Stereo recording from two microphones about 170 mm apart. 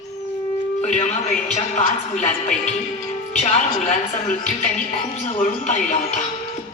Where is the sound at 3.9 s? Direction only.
40° left (ahead or behind).